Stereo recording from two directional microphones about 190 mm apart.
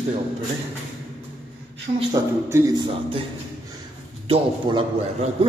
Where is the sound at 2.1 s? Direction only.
15° right (ahead or behind).